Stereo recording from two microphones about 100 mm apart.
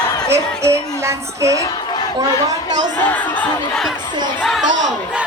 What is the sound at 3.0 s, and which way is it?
Speech, 15° left (ahead or behind).